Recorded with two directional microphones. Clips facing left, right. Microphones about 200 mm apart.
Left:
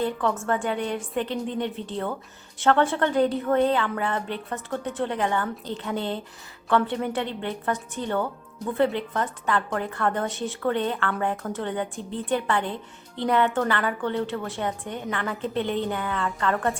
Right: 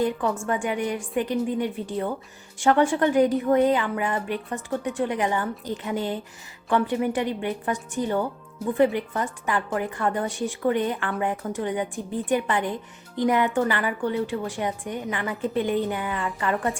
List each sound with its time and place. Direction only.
0.0 s a woman's voice: 10° right (ahead or behind)